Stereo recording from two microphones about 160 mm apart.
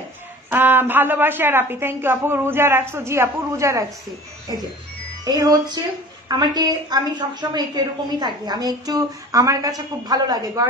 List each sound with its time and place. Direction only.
0.5 s a woman's voice: 10° right (ahead or behind)
5.2 s a woman's voice: 25° right (ahead or behind)